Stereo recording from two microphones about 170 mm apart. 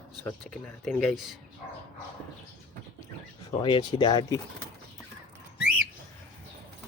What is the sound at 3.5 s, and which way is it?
Speech, 25° left (ahead or behind).